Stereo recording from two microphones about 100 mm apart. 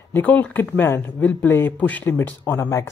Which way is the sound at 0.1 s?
15° left (ahead or behind).